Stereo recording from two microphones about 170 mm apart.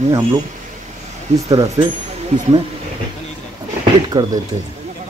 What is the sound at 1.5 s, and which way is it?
Speech, 20° right (ahead or behind).